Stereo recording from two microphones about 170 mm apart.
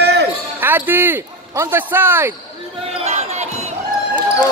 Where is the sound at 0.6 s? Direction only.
15° right (ahead or behind).